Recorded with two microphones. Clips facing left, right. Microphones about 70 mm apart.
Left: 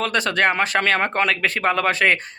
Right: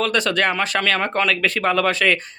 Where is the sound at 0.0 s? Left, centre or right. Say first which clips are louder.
Even; left.